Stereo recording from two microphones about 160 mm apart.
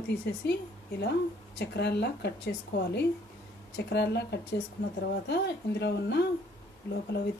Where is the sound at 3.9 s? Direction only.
90° left.